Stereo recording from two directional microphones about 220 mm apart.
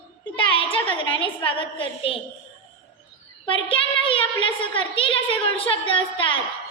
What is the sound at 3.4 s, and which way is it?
A woman's voice, 25° left (ahead or behind).